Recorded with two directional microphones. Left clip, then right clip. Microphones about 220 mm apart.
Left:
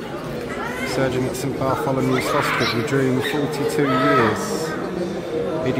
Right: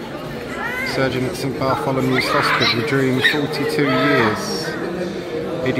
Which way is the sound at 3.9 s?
45° right (ahead or behind).